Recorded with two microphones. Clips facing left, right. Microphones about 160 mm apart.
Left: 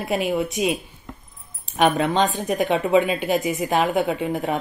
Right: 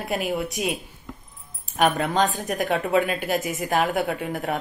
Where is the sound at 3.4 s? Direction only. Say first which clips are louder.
Left 3 dB; 15° left (ahead or behind).